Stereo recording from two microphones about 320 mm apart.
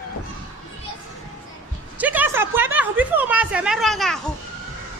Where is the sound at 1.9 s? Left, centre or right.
Centre.